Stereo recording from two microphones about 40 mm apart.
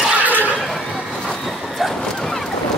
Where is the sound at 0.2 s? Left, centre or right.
Right.